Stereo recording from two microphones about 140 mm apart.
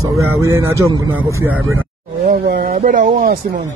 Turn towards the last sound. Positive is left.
turn(degrees=-80)